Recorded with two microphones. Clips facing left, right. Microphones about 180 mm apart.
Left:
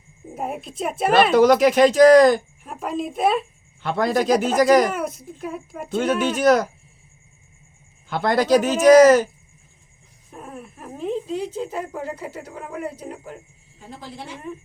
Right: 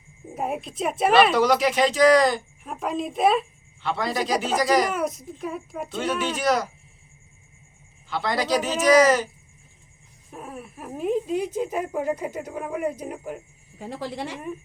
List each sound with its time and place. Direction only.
0.3 s a woman's voice: centre (ahead or behind)
1.3 s speech: 45° left (ahead or behind)
2.6 s a child's voice: centre (ahead or behind)
3.8 s speech: 50° left (ahead or behind)
4.9 s a child's voice: centre (ahead or behind)
5.9 s speech: 50° left (ahead or behind)
8.1 s speech: 50° left (ahead or behind)
10.3 s speech: 5° right (ahead or behind)
13.7 s a woman's voice: 75° right (ahead or behind)